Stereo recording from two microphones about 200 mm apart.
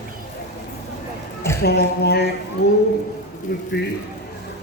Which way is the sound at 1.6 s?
55° left (ahead or behind).